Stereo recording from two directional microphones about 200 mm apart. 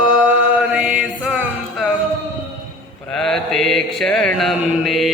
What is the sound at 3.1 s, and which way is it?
Mantra, 5° left (ahead or behind).